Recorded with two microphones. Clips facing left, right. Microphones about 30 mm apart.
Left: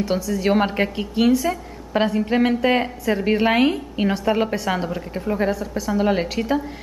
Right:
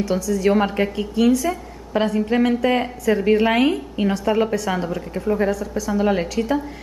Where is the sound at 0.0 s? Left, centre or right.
Left.